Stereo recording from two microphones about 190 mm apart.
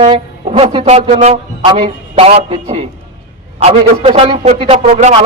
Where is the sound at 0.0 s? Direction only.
25° right (ahead or behind).